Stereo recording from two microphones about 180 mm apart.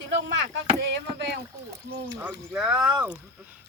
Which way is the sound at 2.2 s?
10° right (ahead or behind).